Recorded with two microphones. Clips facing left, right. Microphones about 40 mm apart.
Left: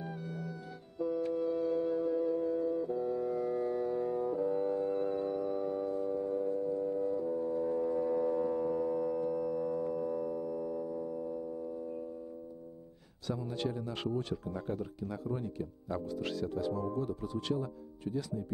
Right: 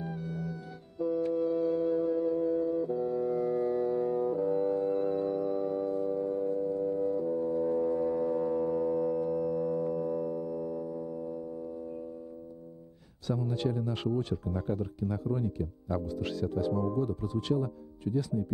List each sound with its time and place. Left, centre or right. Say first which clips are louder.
0.0 s music: right 4 dB; centre
13.3 s speech: right 5 dB; centre
13.9 s speech: right 4 dB; centre